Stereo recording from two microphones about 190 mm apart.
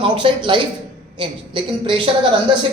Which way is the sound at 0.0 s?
25° right (ahead or behind).